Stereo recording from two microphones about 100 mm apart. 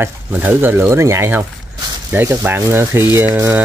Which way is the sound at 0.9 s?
30° right (ahead or behind).